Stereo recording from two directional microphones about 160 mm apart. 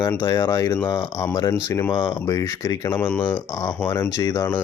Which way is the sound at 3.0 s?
10° left (ahead or behind).